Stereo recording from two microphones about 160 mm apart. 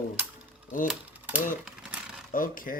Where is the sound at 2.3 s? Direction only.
60° left (ahead or behind).